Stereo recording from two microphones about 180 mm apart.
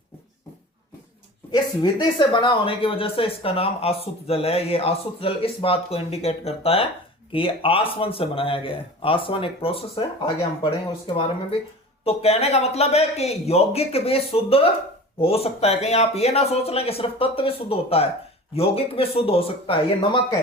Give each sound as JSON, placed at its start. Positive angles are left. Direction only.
{"t": 1.5, "sound": "speech", "side_deg": 20}